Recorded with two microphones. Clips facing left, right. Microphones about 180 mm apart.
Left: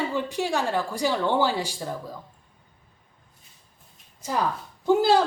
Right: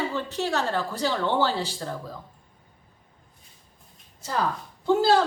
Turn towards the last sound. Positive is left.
turn(degrees=15)  # may be behind; listen again after turning